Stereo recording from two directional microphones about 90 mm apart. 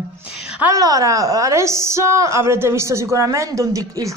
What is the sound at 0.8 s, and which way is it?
A woman's voice, 40° right (ahead or behind).